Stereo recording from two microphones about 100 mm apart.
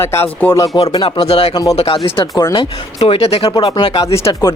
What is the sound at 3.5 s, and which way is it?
Speech, 50° left (ahead or behind).